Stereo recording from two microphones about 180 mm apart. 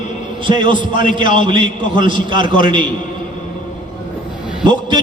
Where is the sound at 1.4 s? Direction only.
25° right (ahead or behind).